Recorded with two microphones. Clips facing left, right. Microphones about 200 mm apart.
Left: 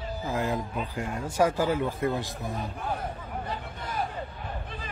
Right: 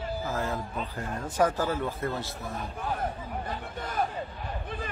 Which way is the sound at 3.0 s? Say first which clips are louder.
Right 2 dB; 50° right (ahead or behind).